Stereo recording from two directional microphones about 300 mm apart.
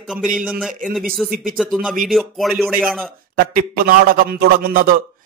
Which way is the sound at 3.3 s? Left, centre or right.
Right.